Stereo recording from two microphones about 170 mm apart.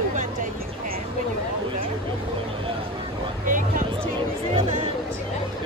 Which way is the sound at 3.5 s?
50° right (ahead or behind).